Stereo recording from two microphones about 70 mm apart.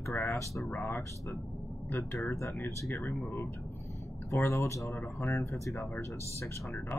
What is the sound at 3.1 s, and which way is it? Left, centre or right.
Speech, left.